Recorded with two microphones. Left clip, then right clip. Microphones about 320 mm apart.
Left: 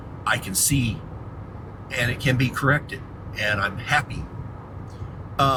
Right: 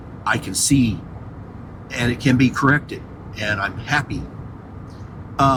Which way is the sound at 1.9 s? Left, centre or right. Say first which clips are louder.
Right 4 dB; right.